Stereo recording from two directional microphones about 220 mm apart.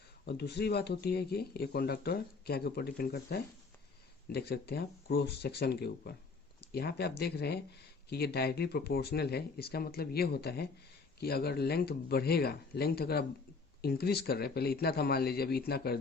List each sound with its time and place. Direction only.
0.3 s speech: 50° left (ahead or behind)